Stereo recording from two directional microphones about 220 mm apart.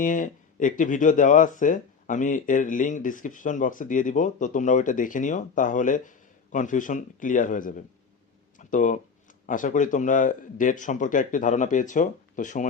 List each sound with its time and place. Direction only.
0.0 s speech: 35° left (ahead or behind)